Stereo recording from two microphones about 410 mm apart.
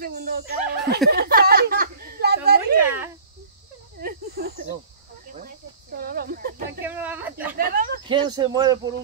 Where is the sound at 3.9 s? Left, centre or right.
Right.